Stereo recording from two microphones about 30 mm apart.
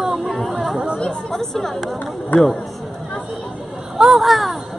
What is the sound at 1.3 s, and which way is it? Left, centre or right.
Speech, centre.